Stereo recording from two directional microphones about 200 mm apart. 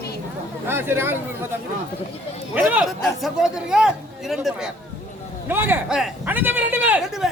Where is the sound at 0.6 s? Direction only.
10° right (ahead or behind).